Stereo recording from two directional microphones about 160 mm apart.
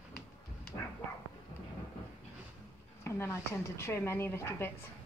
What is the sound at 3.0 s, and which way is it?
A woman's voice, 15° left (ahead or behind).